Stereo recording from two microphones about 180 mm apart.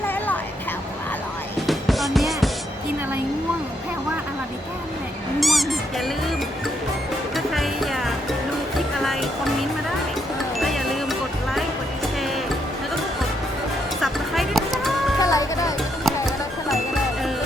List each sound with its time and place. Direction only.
1.6 s music: centre (ahead or behind)
5.4 s a sound: centre (ahead or behind)
7.3 s music: centre (ahead or behind)
14.0 s music: centre (ahead or behind)
15.2 s music: 20° left (ahead or behind)
16.0 s music: centre (ahead or behind)